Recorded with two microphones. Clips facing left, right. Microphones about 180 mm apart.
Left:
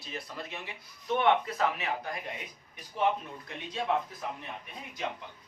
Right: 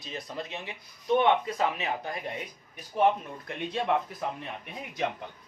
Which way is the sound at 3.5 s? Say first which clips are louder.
Right 8 dB; 55° right (ahead or behind).